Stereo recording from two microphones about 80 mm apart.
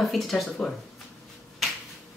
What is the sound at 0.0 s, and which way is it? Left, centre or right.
Speech, centre.